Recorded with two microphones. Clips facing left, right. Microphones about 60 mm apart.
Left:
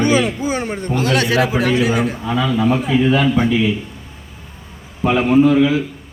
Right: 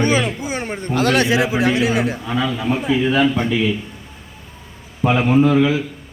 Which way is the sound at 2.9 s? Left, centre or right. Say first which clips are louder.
Right 2 dB; centre.